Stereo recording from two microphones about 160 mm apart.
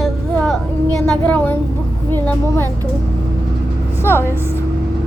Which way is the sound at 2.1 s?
15° left (ahead or behind).